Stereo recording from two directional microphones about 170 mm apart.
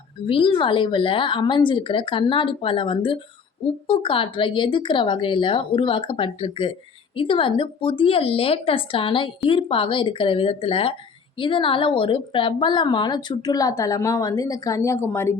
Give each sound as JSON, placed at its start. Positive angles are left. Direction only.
{"t": 0.3, "sound": "a woman's voice", "side_deg": 30}